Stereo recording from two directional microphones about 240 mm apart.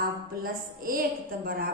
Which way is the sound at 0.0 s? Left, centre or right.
Right.